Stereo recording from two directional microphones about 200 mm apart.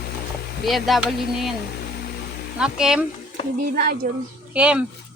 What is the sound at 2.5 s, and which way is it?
Speech, 5° right (ahead or behind).